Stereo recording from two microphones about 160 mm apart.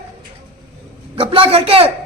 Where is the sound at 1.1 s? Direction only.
35° right (ahead or behind).